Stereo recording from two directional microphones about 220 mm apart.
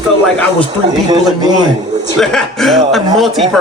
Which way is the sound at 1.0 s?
20° right (ahead or behind).